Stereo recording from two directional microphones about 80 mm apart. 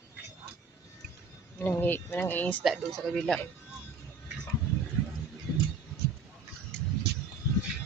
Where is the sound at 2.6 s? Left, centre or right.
Centre.